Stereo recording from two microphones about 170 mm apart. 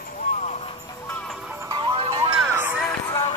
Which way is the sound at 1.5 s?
15° right (ahead or behind).